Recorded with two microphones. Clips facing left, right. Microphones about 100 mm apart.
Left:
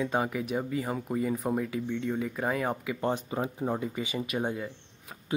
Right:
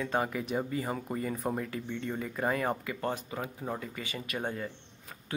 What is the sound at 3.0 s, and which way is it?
Speech, 25° left (ahead or behind).